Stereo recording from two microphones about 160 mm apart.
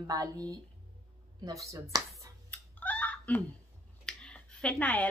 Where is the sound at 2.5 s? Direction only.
10° left (ahead or behind).